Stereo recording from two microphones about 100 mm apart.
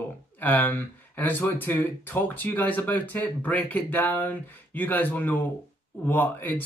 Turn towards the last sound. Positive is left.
turn(degrees=20)  # may be behind; listen again after turning